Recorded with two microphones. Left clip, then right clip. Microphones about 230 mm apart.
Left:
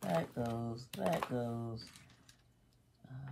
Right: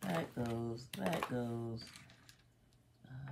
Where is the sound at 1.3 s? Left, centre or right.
Left.